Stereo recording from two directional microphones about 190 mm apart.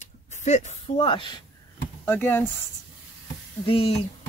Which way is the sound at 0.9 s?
25° left (ahead or behind).